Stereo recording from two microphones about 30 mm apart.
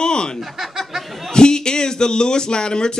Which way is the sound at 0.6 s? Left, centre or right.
Centre.